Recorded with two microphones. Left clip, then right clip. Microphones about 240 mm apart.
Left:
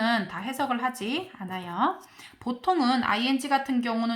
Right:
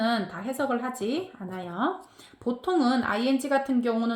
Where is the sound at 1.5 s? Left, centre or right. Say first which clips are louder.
Left 3 dB; left.